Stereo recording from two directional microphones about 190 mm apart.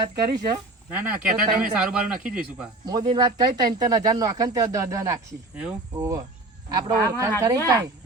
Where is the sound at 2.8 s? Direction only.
20° right (ahead or behind).